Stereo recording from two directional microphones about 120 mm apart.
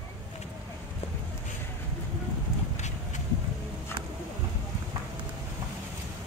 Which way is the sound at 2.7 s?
75° left (ahead or behind).